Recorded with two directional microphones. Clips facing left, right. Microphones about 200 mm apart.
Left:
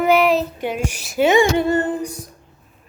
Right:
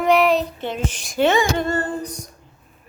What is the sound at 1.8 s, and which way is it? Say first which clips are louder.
Speech: left 4 dB; 20° left (ahead or behind).